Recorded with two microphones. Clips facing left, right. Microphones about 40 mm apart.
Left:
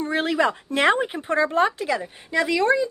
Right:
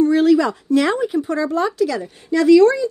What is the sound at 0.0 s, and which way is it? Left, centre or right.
Speech, left.